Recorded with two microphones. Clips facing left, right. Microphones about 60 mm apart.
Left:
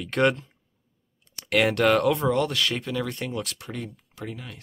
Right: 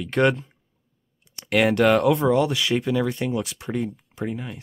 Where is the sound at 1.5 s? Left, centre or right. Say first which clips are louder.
Right 3 dB; centre.